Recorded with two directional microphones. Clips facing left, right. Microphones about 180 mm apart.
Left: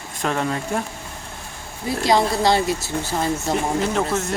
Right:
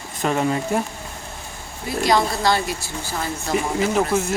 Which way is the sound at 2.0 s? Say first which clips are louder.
Left 1 dB; 25° left (ahead or behind).